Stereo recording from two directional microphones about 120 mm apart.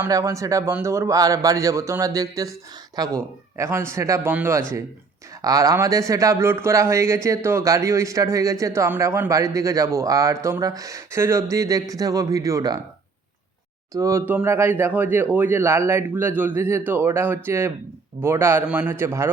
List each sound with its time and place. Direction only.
0.1 s a man's voice: 25° right (ahead or behind)
5.4 s a man's voice: 30° right (ahead or behind)
13.9 s a man's voice: 25° right (ahead or behind)